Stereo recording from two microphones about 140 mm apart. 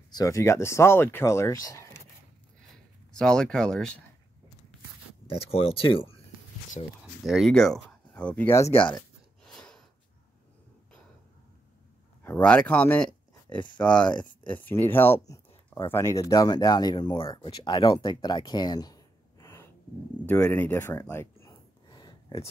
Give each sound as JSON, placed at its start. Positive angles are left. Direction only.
{"t": 0.1, "sound": "speech", "side_deg": 25}
{"t": 2.7, "sound": "a sound", "side_deg": 5}
{"t": 5.2, "sound": "speech", "side_deg": 40}
{"t": 7.2, "sound": "speech", "side_deg": 0}
{"t": 8.7, "sound": "speech", "side_deg": 35}
{"t": 9.4, "sound": "gasp", "side_deg": 5}
{"t": 12.2, "sound": "speech", "side_deg": 15}
{"t": 21.8, "sound": "a sound", "side_deg": 30}